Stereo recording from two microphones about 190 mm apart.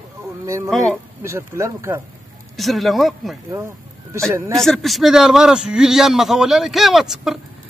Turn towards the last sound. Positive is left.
turn(degrees=0)  # may be behind; listen again after turning